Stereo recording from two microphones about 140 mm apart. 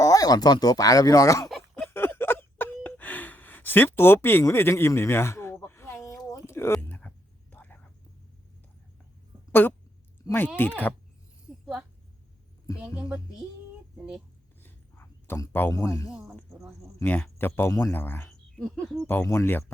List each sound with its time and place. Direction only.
0.0 s speech: 25° left (ahead or behind)
1.9 s a sound: 15° left (ahead or behind)
7.5 s whispering: 10° left (ahead or behind)
9.5 s speech: 15° left (ahead or behind)
11.6 s a sound: 5° right (ahead or behind)
13.0 s music: 5° right (ahead or behind)
14.6 s a sound: 15° left (ahead or behind)
17.0 s speech: 15° left (ahead or behind)
18.5 s speech: 5° left (ahead or behind)
19.0 s speech: 15° left (ahead or behind)